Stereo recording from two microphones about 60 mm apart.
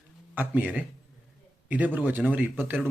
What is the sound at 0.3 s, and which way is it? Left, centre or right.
Speech, right.